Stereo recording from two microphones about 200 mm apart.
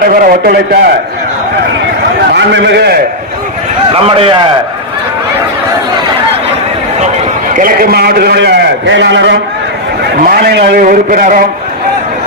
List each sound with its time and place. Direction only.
0.0 s a man's voice: 45° right (ahead or behind)
2.3 s a man's voice: 60° right (ahead or behind)
3.9 s a man's voice: 30° right (ahead or behind)
7.5 s a man's voice: 45° right (ahead or behind)